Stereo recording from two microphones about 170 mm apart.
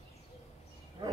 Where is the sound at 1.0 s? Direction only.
25° right (ahead or behind).